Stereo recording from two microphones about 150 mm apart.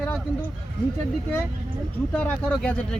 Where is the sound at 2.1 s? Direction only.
10° left (ahead or behind).